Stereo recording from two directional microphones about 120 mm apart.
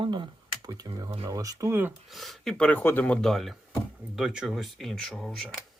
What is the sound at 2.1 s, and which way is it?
Speech, centre (ahead or behind).